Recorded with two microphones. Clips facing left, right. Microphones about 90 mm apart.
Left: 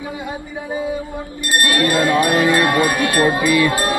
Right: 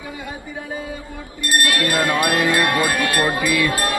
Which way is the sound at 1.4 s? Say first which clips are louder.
Left 1 dB; 20° left (ahead or behind).